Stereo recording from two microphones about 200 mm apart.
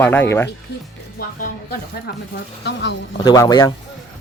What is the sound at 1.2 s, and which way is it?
Speech, 45° left (ahead or behind).